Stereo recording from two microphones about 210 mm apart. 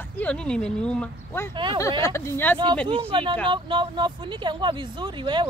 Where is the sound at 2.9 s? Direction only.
25° right (ahead or behind).